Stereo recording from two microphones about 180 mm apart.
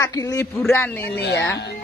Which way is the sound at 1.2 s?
65° left (ahead or behind).